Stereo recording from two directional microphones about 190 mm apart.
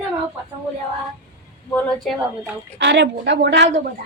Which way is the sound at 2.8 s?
65° right (ahead or behind).